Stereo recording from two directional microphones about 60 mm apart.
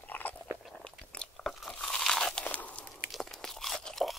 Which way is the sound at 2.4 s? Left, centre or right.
Left.